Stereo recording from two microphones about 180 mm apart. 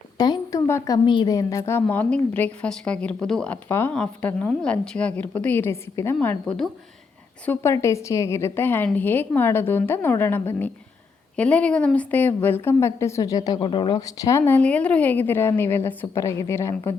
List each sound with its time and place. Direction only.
0.2 s a woman's voice: 20° left (ahead or behind)